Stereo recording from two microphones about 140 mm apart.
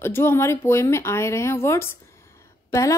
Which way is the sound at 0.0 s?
15° left (ahead or behind).